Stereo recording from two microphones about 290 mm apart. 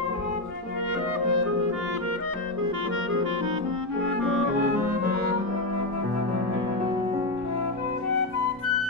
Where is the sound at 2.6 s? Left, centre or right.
Right.